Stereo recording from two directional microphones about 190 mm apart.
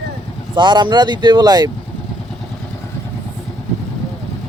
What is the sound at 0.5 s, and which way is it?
Speech, 25° right (ahead or behind).